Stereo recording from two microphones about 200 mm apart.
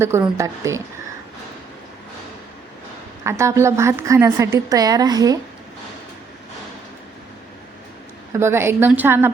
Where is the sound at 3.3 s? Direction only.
15° right (ahead or behind).